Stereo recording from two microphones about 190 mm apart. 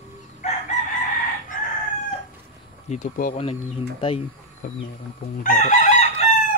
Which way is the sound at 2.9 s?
45° left (ahead or behind).